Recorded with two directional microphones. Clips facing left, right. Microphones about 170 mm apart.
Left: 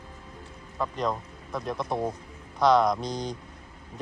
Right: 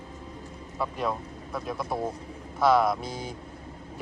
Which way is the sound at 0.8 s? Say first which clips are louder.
Left 1 dB; 5° right (ahead or behind).